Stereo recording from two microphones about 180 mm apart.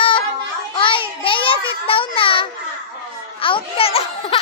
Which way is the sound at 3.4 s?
30° left (ahead or behind).